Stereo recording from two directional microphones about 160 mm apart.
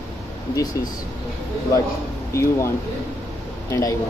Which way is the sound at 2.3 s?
20° left (ahead or behind).